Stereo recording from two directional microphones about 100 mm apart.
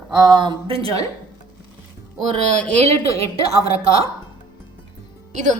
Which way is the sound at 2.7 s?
90° right.